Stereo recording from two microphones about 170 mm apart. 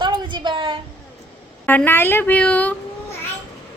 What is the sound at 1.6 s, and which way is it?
A woman's voice, 10° left (ahead or behind).